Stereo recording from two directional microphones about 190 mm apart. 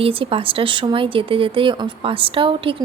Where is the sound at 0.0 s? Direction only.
30° right (ahead or behind).